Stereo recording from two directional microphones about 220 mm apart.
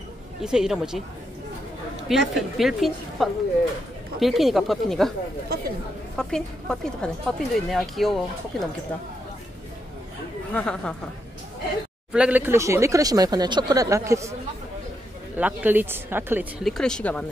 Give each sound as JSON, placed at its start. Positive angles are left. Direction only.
{"t": 0.4, "sound": "a woman's voice", "side_deg": -5}
{"t": 2.0, "sound": "a woman's voice", "side_deg": 0}
{"t": 6.1, "sound": "a woman's voice", "side_deg": 5}
{"t": 10.5, "sound": "a woman's voice", "side_deg": 5}
{"t": 12.1, "sound": "speech", "side_deg": -5}
{"t": 15.3, "sound": "speech", "side_deg": -10}
{"t": 16.7, "sound": "a woman's voice", "side_deg": 5}